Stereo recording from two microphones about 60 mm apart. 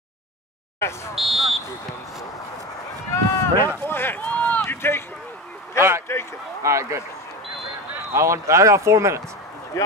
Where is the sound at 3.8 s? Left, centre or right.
Left.